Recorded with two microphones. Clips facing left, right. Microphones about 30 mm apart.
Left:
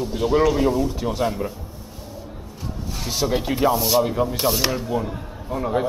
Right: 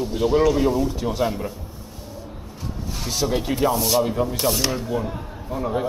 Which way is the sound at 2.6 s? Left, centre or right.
Centre.